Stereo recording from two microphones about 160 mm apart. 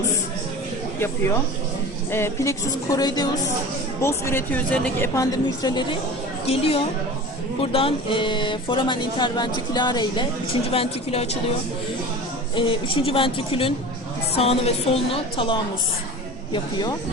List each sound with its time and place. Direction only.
2.0 s speech: 15° left (ahead or behind)
4.0 s a woman's voice: 15° left (ahead or behind)
6.4 s a woman's voice: 35° left (ahead or behind)
10.7 s a woman's voice: 40° left (ahead or behind)
12.5 s a woman's voice: 35° left (ahead or behind)